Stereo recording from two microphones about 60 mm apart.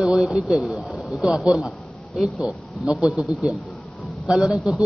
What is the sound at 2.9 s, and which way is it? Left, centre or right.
Speech, centre.